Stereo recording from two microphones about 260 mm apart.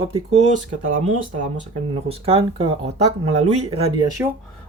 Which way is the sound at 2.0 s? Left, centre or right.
Right.